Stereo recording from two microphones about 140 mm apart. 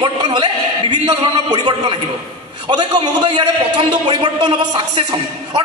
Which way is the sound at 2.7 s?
35° right (ahead or behind).